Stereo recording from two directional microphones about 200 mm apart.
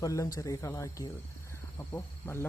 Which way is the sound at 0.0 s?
15° left (ahead or behind).